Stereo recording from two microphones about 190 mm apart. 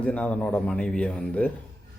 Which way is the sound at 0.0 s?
5° left (ahead or behind).